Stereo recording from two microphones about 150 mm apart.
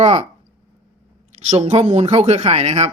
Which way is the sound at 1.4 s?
50° right (ahead or behind).